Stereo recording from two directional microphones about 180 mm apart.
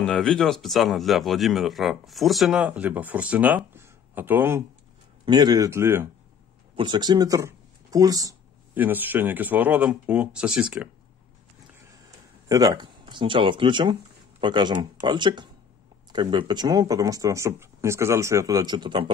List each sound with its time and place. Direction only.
0.0 s speech: 5° left (ahead or behind); by 4.6 s 10° right (ahead or behind)
5.2 s speech: 25° right (ahead or behind); by 10.9 s 5° right (ahead or behind)
12.4 s speech: 20° right (ahead or behind)